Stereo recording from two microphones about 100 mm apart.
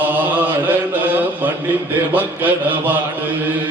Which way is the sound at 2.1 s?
15° right (ahead or behind).